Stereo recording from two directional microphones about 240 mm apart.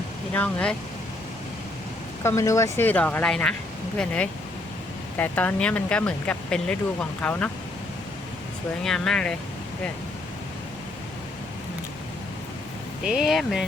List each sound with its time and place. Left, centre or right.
0.3 s speech: centre
2.2 s speech: centre
8.8 s speech: centre
13.1 s speech: centre